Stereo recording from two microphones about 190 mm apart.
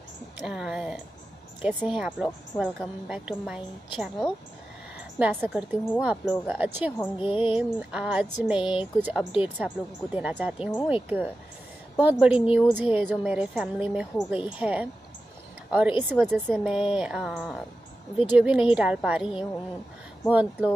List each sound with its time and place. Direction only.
0.4 s speech: 5° right (ahead or behind)